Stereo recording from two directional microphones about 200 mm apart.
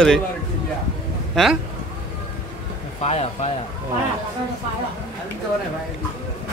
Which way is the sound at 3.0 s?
30° left (ahead or behind).